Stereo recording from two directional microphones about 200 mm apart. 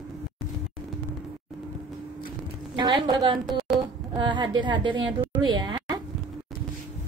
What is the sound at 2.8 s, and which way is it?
A woman's voice, 20° right (ahead or behind).